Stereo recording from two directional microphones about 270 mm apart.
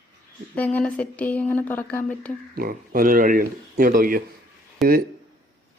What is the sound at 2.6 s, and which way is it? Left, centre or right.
Speech, right.